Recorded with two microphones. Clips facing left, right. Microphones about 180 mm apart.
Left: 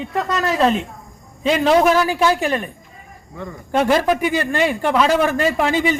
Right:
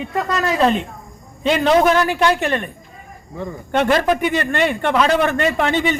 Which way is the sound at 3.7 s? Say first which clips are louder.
Even; 5° left (ahead or behind).